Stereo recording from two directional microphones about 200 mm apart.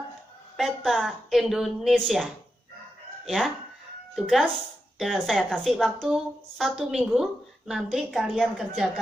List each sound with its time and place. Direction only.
0.5 s a woman's voice: centre (ahead or behind)